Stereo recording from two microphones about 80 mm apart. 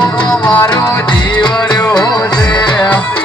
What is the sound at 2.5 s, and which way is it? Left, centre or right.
Music, left.